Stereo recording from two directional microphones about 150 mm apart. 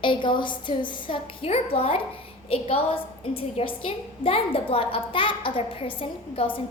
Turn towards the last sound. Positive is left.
turn(degrees=35)  # may be behind; listen again after turning